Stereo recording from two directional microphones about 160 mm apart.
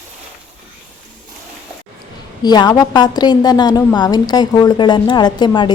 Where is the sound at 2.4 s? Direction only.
25° left (ahead or behind).